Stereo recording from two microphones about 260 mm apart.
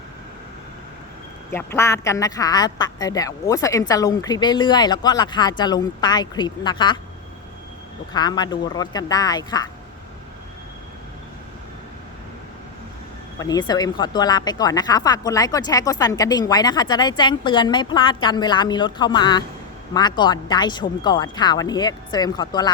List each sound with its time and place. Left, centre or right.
1.5 s speech: centre
8.1 s speech: centre
13.4 s speech: centre